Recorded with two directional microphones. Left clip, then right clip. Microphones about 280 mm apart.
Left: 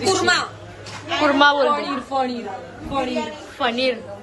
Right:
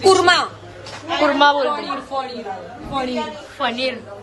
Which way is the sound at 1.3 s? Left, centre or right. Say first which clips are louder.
Left 1 dB; centre.